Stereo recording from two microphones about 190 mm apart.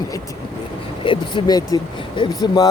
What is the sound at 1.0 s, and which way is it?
Speech, 25° left (ahead or behind).